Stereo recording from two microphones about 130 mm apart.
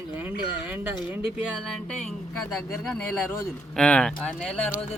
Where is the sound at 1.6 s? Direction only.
5° left (ahead or behind).